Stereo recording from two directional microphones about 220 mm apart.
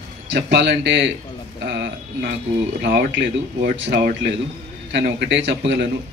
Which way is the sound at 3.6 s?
45° right (ahead or behind).